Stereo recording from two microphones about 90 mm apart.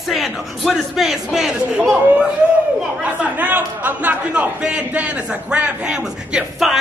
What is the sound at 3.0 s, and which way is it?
A man's voice, 15° right (ahead or behind).